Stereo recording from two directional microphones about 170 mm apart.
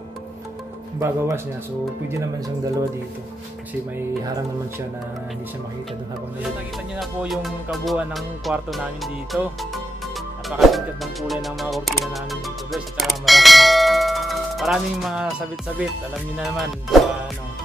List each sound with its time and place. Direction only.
0.9 s speech: 15° right (ahead or behind)
7.0 s music: centre (ahead or behind)
10.5 s speech: centre (ahead or behind)
16.3 s music: centre (ahead or behind)